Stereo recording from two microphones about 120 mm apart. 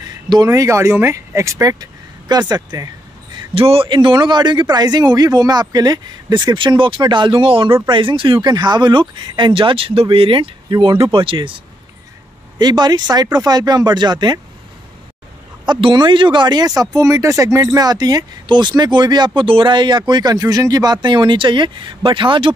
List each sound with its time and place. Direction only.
0.5 s speech: 25° right (ahead or behind)
3.3 s speech: 50° right (ahead or behind)
15.6 s speech: 40° right (ahead or behind)